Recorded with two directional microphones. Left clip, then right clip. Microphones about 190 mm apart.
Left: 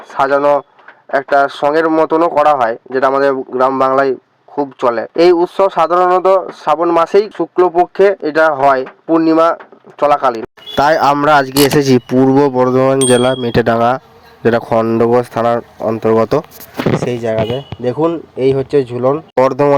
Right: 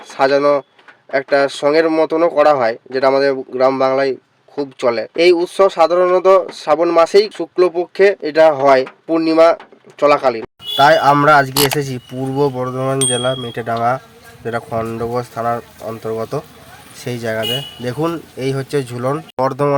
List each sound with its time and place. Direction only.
0.1 s speech: centre (ahead or behind)
10.8 s speech: 50° left (ahead or behind)
11.5 s speech: centre (ahead or behind)
11.8 s speech: 45° left (ahead or behind)
17.1 s speech: 10° left (ahead or behind)
17.8 s speech: centre (ahead or behind)
19.4 s speech: 30° left (ahead or behind)